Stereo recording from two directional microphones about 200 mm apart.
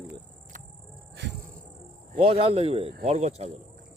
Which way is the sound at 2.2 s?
30° right (ahead or behind).